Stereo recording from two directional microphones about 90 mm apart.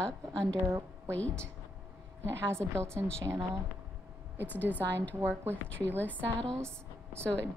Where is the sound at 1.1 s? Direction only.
15° left (ahead or behind).